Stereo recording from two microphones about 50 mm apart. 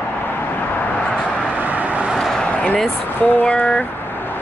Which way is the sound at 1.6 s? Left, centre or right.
Right.